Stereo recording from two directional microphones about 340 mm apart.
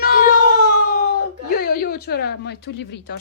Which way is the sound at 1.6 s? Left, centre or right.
Left.